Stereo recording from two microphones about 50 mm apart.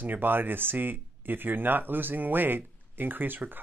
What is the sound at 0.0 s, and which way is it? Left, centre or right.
Speech, right.